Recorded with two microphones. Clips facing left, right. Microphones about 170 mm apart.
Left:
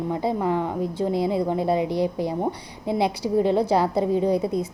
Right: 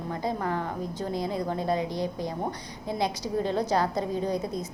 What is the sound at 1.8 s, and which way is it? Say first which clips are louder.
Speech: left 7 dB; 70° left (ahead or behind).